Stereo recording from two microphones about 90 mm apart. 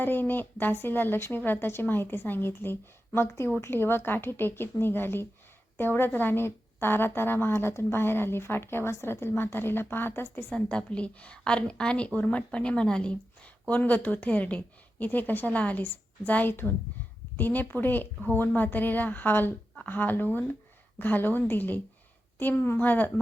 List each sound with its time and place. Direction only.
0.0 s speech: 20° left (ahead or behind)
10.5 s a woman's voice: 10° left (ahead or behind)